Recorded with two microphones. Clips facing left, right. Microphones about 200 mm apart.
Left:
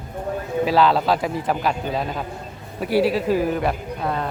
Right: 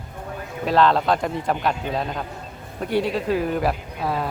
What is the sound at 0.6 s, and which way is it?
Speech, 5° left (ahead or behind).